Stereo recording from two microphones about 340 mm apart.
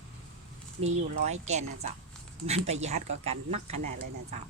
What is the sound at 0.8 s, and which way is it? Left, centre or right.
Speech, centre.